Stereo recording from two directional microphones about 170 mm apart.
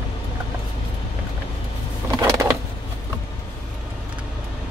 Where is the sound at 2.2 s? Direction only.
15° right (ahead or behind).